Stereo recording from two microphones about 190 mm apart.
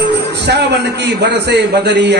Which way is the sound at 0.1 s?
60° right (ahead or behind).